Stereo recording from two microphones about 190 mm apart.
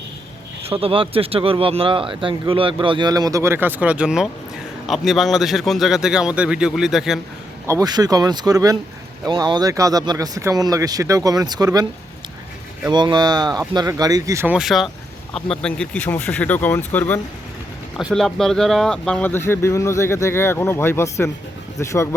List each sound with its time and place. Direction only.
0.6 s a man's voice: 30° right (ahead or behind); by 7.2 s centre (ahead or behind)
7.7 s speech: 20° right (ahead or behind)
12.9 s speech: 25° right (ahead or behind); by 22.1 s 15° left (ahead or behind)